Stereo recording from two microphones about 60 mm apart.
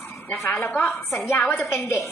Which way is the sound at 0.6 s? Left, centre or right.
Left.